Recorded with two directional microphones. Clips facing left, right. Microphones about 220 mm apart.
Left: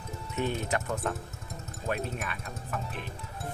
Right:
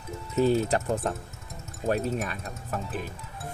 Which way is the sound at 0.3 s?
35° right (ahead or behind).